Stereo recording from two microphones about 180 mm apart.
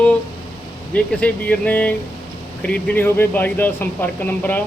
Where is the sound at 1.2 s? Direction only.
10° left (ahead or behind).